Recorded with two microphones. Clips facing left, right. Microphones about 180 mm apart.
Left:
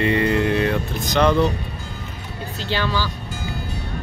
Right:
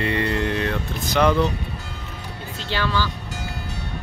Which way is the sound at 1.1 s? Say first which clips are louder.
Left 1 dB; 5° right (ahead or behind).